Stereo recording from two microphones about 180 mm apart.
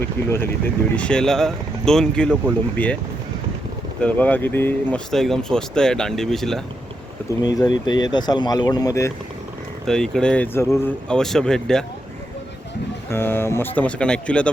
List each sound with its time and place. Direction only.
0.3 s speech: 15° left (ahead or behind)
4.0 s speech: 10° left (ahead or behind)
7.4 s speech: 20° left (ahead or behind)
9.8 s speech: 5° left (ahead or behind)
13.1 s speech: 15° left (ahead or behind)